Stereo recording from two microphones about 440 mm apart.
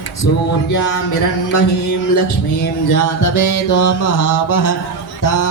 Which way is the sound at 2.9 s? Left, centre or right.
Left.